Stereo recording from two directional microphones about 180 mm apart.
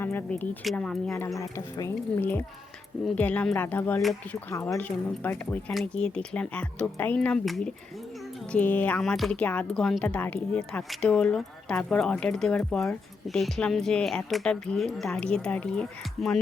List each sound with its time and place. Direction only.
0.0 s speech: 10° left (ahead or behind)
1.4 s speech: 15° left (ahead or behind)